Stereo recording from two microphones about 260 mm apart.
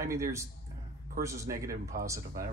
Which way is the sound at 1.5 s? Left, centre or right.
Right.